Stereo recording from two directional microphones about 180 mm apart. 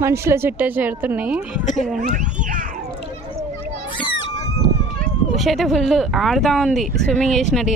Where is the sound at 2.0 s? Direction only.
45° right (ahead or behind).